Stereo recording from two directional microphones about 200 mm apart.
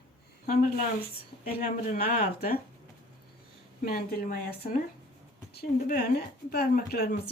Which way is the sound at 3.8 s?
45° left (ahead or behind).